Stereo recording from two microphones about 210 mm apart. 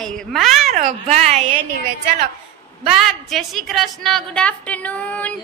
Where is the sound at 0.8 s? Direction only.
35° right (ahead or behind).